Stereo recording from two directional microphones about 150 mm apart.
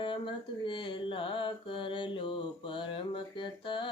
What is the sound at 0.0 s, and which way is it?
Mantra, 35° left (ahead or behind).